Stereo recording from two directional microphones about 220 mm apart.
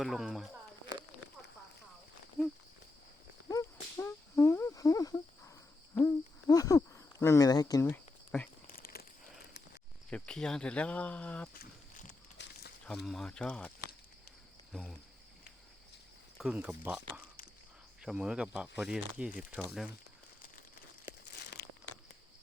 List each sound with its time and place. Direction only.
0.0 s speech: centre (ahead or behind)
3.5 s a sound: 15° left (ahead or behind)
5.9 s hoot: 10° left (ahead or behind)
8.6 s crumpling: 40° left (ahead or behind)
10.1 s speech: 5° left (ahead or behind)
11.5 s a sound: 40° left (ahead or behind)
12.4 s a sound: 55° left (ahead or behind)
12.8 s speech: centre (ahead or behind)
16.4 s speech: 5° right (ahead or behind)